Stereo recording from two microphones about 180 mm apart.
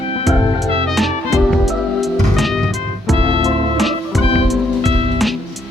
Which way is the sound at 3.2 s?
30° right (ahead or behind).